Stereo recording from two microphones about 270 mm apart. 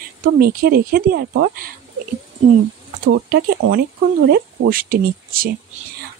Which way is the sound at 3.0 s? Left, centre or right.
Right.